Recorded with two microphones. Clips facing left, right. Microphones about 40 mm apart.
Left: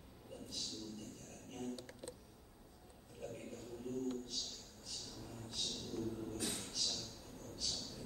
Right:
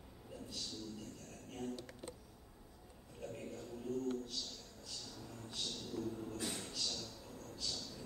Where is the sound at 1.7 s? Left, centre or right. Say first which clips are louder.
Right 1 dB; centre.